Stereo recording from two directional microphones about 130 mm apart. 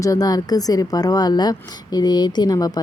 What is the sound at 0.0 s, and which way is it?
A woman's voice, 30° left (ahead or behind).